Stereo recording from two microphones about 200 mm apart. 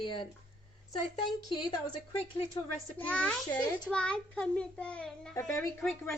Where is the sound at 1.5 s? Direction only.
25° left (ahead or behind).